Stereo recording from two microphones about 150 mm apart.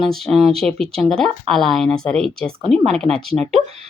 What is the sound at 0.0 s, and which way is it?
Speech, centre (ahead or behind).